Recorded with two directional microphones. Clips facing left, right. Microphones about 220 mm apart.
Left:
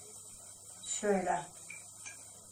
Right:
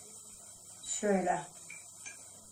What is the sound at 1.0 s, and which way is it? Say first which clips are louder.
Speech: right 1 dB; 25° right (ahead or behind).